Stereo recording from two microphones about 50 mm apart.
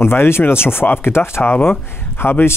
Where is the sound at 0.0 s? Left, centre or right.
Left.